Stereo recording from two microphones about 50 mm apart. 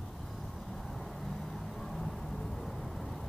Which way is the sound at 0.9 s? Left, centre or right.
Centre.